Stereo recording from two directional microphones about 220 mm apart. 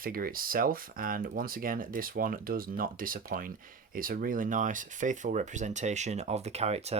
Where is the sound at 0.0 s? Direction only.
40° right (ahead or behind).